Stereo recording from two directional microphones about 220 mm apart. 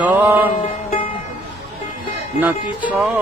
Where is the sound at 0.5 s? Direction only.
30° left (ahead or behind).